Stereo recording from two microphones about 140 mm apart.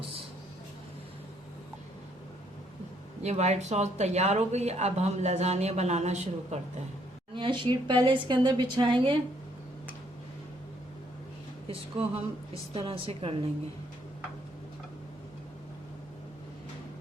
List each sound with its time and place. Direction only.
3.2 s speech: 55° right (ahead or behind)
7.3 s speech: 35° right (ahead or behind)
11.7 s speech: 45° right (ahead or behind)